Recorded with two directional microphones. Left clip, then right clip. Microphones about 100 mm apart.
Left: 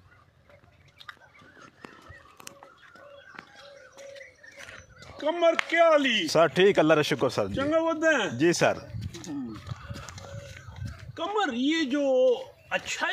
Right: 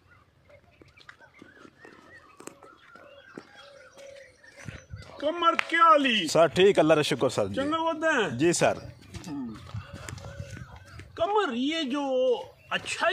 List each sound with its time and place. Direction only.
5.1 s speech: 20° right (ahead or behind)
6.2 s speech: 5° right (ahead or behind)
7.7 s speech: 30° right (ahead or behind)
8.4 s speech: 5° right (ahead or behind)
11.1 s a man's voice: 35° right (ahead or behind)